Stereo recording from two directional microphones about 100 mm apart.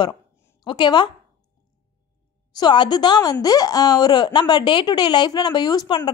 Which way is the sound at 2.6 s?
50° left (ahead or behind).